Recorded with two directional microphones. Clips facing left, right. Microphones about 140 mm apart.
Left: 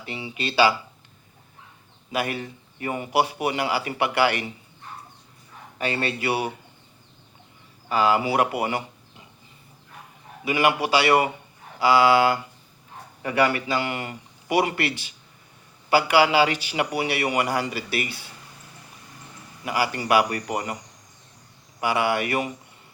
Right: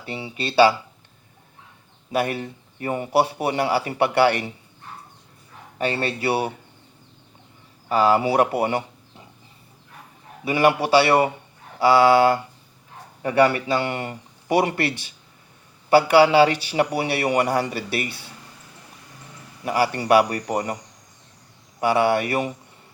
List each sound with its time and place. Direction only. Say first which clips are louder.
0.0 s a man's voice: right 2 dB; 30° right (ahead or behind)
2.1 s a man's voice: right 4 dB; 30° right (ahead or behind)
5.8 s a man's voice: right 3 dB; 30° right (ahead or behind)
7.9 s a man's voice: right 3 dB; 30° right (ahead or behind)
10.4 s a man's voice: right 3 dB; 30° right (ahead or behind)
15.9 s a man's voice: right 4 dB; 30° right (ahead or behind)
19.6 s a man's voice: right 4 dB; 30° right (ahead or behind)
21.8 s a man's voice: right 4 dB; 30° right (ahead or behind)